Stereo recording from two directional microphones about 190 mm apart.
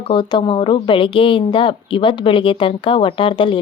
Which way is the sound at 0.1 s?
25° left (ahead or behind).